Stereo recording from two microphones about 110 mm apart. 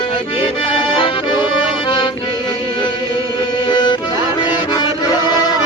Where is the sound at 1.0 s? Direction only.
50° left (ahead or behind).